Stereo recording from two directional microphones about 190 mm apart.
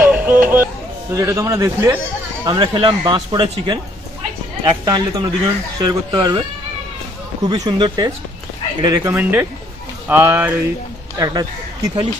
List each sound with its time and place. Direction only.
0.0 s music: 10° right (ahead or behind)
1.1 s a man's voice: 15° right (ahead or behind)
7.4 s a man's voice: 20° right (ahead or behind)